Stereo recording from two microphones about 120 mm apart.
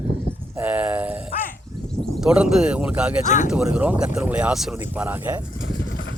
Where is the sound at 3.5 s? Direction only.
5° right (ahead or behind).